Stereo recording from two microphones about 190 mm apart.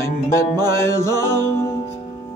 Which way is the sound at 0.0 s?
15° left (ahead or behind).